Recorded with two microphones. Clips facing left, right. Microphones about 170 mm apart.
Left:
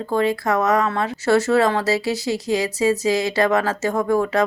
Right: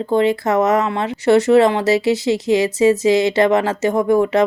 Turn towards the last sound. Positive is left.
turn(degrees=-20)  # may be behind; listen again after turning